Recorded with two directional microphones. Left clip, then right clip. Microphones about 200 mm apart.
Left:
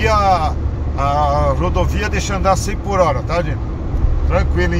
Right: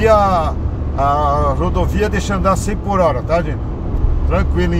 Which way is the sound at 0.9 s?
20° right (ahead or behind).